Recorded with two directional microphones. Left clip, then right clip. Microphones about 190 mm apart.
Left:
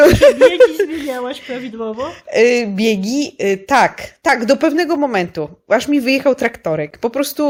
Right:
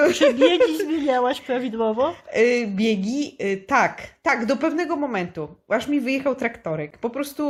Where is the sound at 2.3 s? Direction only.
45° left (ahead or behind).